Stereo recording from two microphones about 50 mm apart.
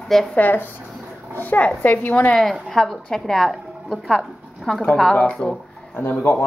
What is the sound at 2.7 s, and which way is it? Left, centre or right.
A woman's voice, centre.